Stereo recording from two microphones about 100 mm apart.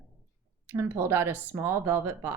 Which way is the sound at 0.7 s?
25° right (ahead or behind).